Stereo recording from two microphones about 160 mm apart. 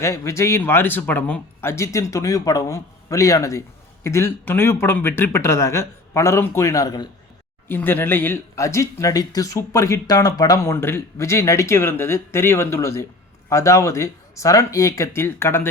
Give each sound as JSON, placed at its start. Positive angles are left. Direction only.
{"t": 0.0, "sound": "a man's voice", "side_deg": 15}
{"t": 7.7, "sound": "a man's voice", "side_deg": 15}